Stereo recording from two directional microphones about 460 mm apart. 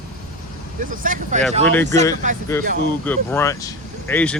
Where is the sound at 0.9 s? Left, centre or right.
Centre.